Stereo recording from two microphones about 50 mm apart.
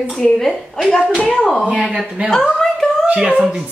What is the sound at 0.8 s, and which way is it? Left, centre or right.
Speech, centre.